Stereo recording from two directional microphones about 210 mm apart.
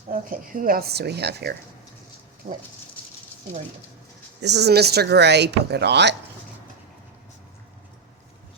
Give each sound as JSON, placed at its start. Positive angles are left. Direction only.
{"t": 0.1, "sound": "speech", "side_deg": -40}
{"t": 2.4, "sound": "speech", "side_deg": -40}
{"t": 4.4, "sound": "speech", "side_deg": -55}